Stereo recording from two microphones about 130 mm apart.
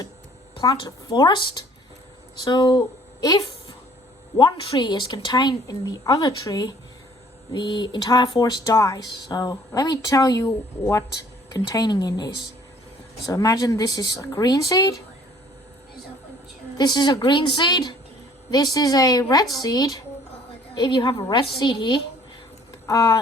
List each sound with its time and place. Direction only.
0.5 s a woman's voice: 40° left (ahead or behind)
16.7 s a woman's voice: 35° left (ahead or behind)